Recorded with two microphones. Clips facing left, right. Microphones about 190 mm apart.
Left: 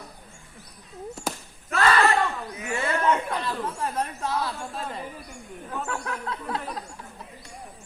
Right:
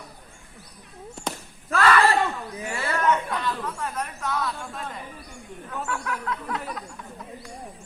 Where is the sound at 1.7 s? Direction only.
30° left (ahead or behind).